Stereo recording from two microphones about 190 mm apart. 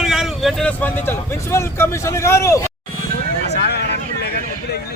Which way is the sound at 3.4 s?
60° left (ahead or behind).